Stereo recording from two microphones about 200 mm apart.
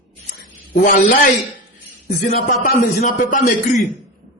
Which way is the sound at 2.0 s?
45° left (ahead or behind).